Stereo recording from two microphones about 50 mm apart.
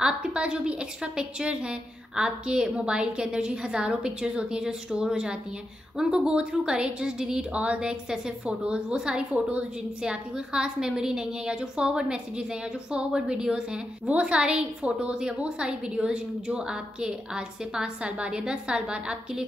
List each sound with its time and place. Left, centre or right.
0.0 s a woman's voice: centre
9.3 s a woman's voice: right
10.3 s a woman's voice: centre